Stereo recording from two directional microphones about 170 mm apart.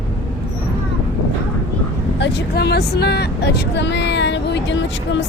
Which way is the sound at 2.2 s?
80° left.